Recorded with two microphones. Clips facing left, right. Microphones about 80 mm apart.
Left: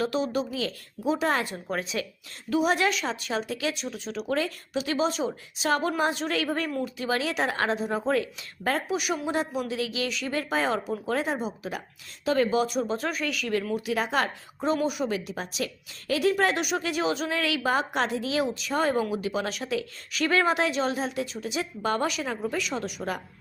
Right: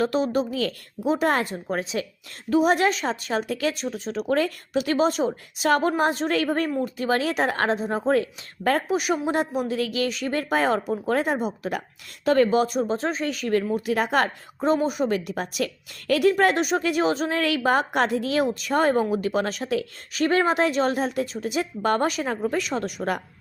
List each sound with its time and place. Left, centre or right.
0.0 s a woman's voice: right
12.9 s a woman's voice: right